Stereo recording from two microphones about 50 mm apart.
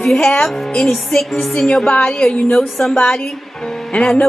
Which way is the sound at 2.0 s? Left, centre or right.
Left.